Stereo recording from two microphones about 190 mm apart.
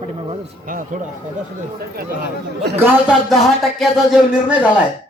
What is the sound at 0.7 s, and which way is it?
Speech, 45° right (ahead or behind).